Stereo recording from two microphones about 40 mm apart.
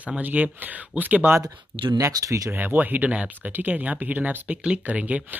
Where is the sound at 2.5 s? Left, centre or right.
Right.